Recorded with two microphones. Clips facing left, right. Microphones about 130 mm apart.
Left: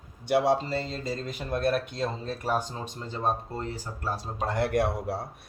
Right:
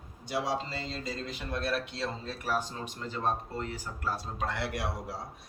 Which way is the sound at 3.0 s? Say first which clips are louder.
Left 3 dB; 30° left (ahead or behind).